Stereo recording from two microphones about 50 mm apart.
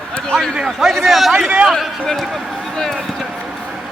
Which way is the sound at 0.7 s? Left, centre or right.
Centre.